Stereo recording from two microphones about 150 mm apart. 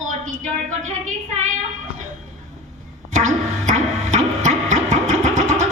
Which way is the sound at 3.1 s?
50° right (ahead or behind).